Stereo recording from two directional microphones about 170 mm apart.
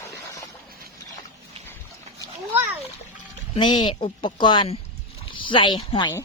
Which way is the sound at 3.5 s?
25° left (ahead or behind).